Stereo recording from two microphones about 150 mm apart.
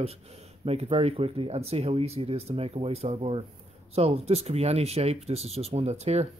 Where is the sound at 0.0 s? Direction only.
45° right (ahead or behind).